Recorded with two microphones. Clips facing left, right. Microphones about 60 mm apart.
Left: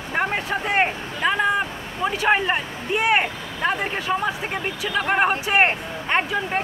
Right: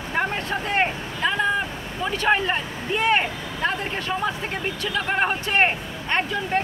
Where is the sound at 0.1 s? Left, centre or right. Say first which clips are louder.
Left 2 dB; centre.